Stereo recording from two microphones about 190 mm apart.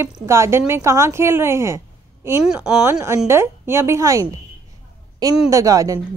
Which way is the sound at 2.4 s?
5° right (ahead or behind).